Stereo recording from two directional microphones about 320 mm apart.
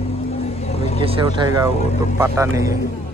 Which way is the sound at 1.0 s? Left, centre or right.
Centre.